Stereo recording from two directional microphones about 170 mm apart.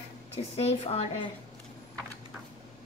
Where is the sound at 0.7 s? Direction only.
35° left (ahead or behind).